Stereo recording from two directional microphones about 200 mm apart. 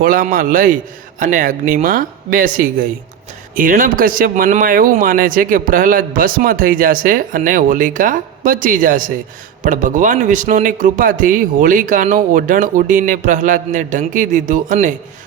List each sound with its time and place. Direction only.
0.0 s a man's voice: 45° right (ahead or behind)